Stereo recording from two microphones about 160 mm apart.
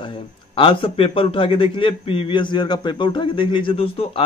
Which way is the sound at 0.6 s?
35° left (ahead or behind).